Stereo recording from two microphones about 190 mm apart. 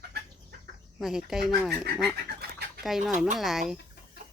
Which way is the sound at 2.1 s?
55° right (ahead or behind).